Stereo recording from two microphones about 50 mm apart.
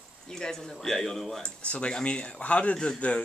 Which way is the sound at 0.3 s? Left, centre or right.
Centre.